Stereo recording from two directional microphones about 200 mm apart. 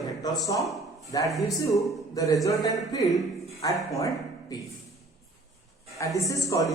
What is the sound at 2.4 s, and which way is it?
Speech, 20° left (ahead or behind).